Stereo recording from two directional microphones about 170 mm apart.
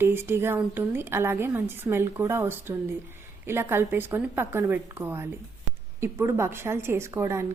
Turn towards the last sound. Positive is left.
turn(degrees=-15)  # may be behind; listen again after turning